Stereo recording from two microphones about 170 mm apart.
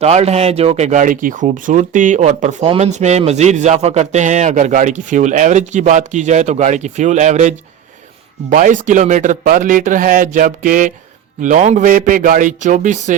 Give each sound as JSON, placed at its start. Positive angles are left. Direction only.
{"t": 0.0, "sound": "speech", "side_deg": -40}